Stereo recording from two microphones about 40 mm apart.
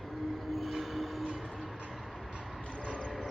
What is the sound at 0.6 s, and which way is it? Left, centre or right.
Train, centre.